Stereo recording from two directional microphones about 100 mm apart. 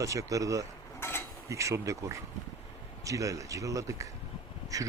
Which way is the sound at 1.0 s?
25° left (ahead or behind).